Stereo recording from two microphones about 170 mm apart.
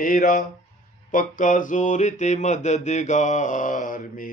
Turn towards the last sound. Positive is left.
turn(degrees=50)  # may be behind; listen again after turning